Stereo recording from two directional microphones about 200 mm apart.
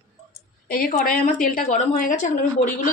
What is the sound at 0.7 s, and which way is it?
A woman's voice, 45° left (ahead or behind).